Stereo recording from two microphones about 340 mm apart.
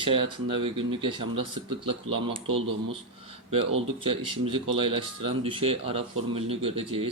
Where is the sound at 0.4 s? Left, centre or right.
Centre.